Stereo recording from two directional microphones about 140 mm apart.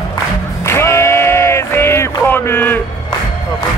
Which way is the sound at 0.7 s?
20° left (ahead or behind).